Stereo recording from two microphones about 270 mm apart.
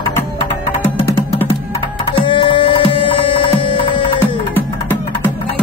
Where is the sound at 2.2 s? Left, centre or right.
Centre.